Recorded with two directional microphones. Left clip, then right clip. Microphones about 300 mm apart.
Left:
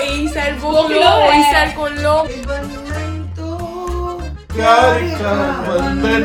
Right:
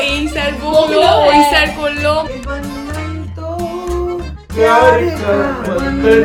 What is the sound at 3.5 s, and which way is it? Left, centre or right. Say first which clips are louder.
Music: right 4 dB; centre.